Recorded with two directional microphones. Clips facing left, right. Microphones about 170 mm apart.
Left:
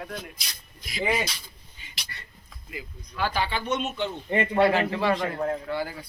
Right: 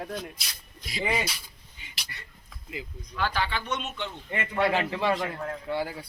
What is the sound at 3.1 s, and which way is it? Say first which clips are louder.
Speech: left 2 dB; 10° left (ahead or behind).